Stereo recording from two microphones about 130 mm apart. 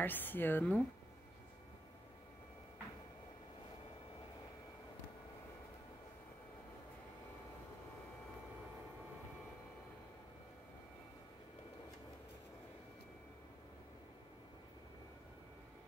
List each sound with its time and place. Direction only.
0.0 s a woman's voice: 15° left (ahead or behind)